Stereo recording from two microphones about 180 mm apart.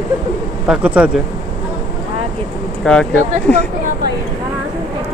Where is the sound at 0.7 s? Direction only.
5° right (ahead or behind).